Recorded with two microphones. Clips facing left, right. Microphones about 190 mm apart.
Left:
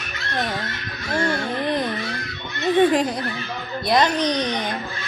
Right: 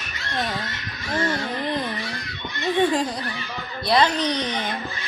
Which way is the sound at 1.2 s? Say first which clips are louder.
Left 2 dB; 15° left (ahead or behind).